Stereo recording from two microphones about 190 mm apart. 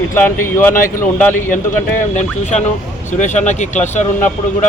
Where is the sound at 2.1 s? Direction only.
40° left (ahead or behind).